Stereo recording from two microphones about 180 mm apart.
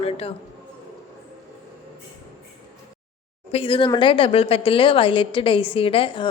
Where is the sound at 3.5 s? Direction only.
30° left (ahead or behind).